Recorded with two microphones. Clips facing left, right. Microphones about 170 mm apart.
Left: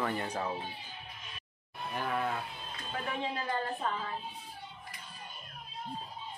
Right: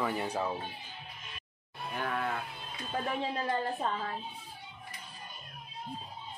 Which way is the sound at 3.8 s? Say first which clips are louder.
Right 1 dB; 30° right (ahead or behind).